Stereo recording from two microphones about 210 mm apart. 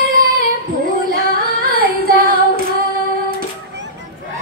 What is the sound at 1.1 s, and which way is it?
Female singing, 45° right (ahead or behind).